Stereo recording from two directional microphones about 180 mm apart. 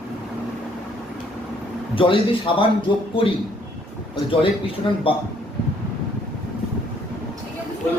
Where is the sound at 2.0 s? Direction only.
30° left (ahead or behind).